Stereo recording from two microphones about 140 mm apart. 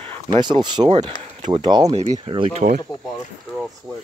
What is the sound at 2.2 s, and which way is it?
Speech, 40° right (ahead or behind).